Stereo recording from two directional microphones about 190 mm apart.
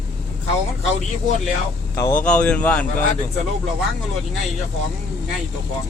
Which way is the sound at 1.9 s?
15° left (ahead or behind).